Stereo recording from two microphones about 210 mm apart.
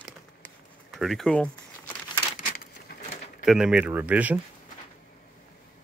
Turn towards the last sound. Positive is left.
turn(degrees=-5)  # may be behind; listen again after turning